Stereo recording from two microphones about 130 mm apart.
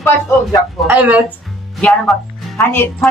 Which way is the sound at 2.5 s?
15° left (ahead or behind).